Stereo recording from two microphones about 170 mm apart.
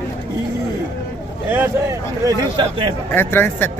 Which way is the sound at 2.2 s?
30° right (ahead or behind).